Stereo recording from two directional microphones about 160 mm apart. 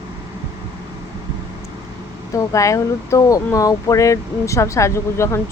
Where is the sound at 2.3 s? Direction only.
20° left (ahead or behind).